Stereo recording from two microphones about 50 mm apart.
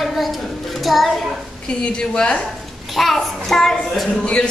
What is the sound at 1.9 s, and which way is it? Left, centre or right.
Speech, centre.